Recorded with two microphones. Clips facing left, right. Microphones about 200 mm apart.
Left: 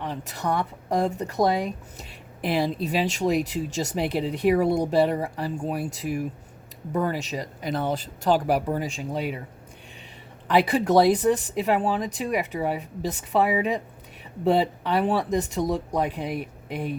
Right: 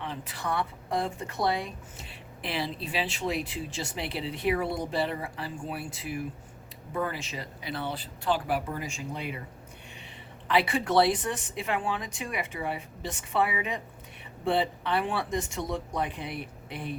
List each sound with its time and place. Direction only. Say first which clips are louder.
0.0 s speech: left 5 dB; 40° left (ahead or behind)
10.5 s speech: left 5 dB; 40° left (ahead or behind)